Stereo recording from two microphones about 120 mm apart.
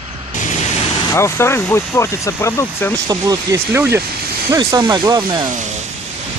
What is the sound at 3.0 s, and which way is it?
Speech, 30° right (ahead or behind).